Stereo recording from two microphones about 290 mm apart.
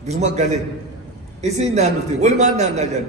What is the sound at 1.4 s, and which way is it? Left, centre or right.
A man's voice, right.